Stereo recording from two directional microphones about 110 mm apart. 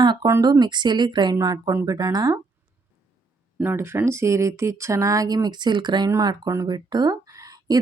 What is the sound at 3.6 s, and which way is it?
Speech, 20° right (ahead or behind).